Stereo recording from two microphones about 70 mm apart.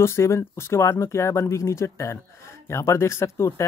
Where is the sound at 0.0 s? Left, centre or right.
Left.